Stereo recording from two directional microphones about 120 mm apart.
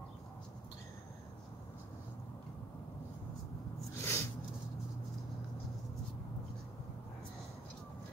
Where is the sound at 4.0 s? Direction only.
20° left (ahead or behind).